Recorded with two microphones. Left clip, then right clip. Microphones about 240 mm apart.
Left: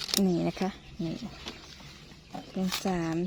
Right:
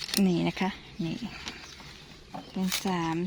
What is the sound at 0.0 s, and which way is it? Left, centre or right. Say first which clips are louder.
Speech: even; centre.